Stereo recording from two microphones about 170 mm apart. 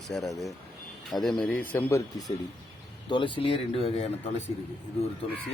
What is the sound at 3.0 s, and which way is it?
Speech, 30° left (ahead or behind).